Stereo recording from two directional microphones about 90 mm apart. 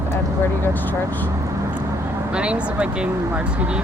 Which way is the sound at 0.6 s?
20° left (ahead or behind).